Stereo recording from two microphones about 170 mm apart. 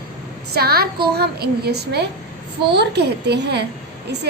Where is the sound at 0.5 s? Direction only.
65° right (ahead or behind).